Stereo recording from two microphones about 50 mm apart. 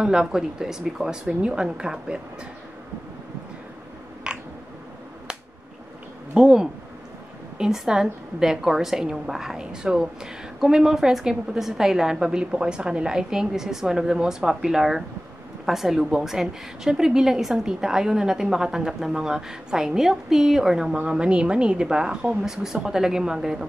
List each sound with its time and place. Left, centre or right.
0.0 s a woman's voice: centre
4.2 s a sound: centre
6.3 s a woman's voice: centre